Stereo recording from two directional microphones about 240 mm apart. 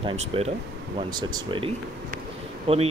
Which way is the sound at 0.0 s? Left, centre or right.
Right.